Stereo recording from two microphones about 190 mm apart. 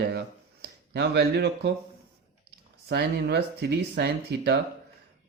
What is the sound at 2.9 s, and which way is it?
Speech, 65° right (ahead or behind).